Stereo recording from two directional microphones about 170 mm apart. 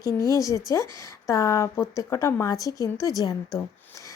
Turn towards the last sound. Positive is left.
turn(degrees=20)  # may be behind; listen again after turning